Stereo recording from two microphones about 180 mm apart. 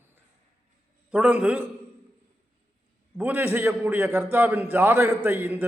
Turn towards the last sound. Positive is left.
turn(degrees=-10)  # may be behind; listen again after turning